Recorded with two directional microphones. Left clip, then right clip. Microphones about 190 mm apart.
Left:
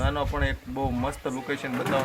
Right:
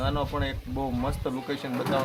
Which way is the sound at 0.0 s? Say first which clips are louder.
Left 1 dB; 5° left (ahead or behind).